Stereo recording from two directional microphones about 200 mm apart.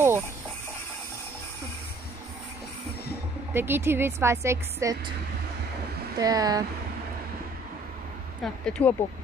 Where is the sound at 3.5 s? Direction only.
10° right (ahead or behind).